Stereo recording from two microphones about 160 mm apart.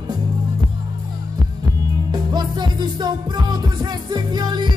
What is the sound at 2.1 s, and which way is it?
Music, 25° right (ahead or behind).